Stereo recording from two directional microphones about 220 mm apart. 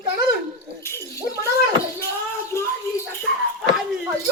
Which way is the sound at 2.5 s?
10° left (ahead or behind).